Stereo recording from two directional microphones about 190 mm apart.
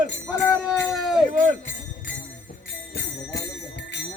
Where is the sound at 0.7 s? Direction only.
5° left (ahead or behind).